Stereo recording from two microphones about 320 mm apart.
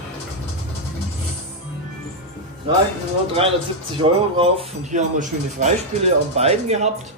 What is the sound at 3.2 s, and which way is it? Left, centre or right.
Speech, centre.